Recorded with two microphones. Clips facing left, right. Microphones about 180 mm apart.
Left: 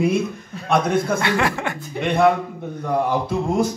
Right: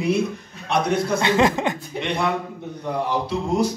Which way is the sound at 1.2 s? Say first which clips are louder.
Right 3 dB; 20° right (ahead or behind).